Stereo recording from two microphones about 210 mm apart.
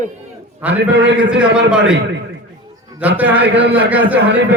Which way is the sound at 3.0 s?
5° right (ahead or behind).